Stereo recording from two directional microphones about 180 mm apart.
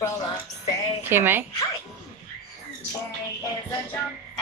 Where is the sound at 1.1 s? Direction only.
10° right (ahead or behind).